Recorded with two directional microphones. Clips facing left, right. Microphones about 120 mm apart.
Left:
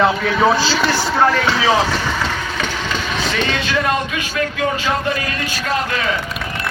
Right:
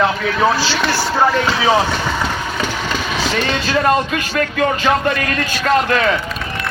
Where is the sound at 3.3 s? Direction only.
45° right (ahead or behind).